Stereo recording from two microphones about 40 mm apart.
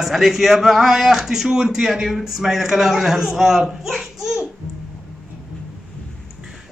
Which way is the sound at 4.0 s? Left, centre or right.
Centre.